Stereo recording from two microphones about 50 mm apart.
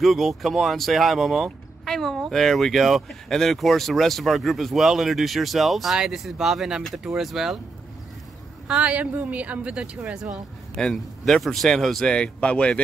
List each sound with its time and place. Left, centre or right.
0.0 s speech: centre
8.6 s speech: right
10.7 s a man's voice: centre
11.2 s speech: centre
12.1 s speech: left